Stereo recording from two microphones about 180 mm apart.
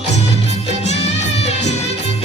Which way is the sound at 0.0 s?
35° left (ahead or behind).